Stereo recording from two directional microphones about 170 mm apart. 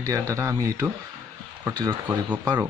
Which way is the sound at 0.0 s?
15° right (ahead or behind).